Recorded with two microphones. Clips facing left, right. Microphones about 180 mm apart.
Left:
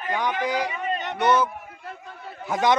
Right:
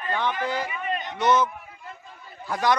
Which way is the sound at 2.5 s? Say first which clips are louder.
Left 2 dB; 20° left (ahead or behind).